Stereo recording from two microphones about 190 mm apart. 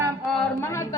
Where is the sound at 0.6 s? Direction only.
15° left (ahead or behind).